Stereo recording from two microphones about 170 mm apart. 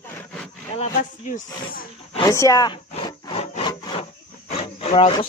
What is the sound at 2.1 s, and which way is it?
Speech, 20° left (ahead or behind).